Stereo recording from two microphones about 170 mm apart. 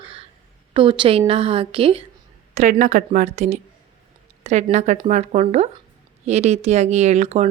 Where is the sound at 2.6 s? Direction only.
45° right (ahead or behind).